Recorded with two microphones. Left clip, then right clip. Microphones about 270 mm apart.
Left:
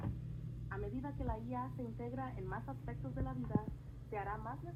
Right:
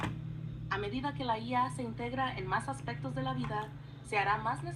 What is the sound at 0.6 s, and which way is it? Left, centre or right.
Speech, right.